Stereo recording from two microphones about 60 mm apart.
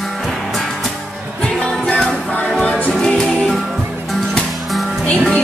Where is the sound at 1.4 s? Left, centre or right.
Centre.